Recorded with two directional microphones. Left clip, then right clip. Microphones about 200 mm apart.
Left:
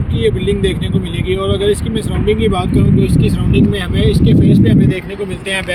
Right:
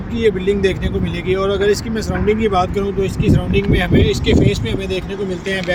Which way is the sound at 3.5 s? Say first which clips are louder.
Even; 35° right (ahead or behind).